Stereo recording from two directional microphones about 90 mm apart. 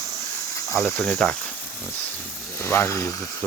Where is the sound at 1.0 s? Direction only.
10° left (ahead or behind).